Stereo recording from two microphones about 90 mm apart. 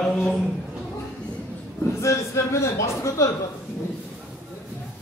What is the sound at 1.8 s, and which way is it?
A man's voice, 35° left (ahead or behind).